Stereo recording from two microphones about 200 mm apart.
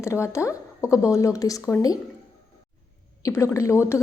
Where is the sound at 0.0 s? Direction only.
15° left (ahead or behind).